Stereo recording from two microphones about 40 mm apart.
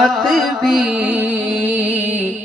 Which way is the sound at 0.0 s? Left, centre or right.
Centre.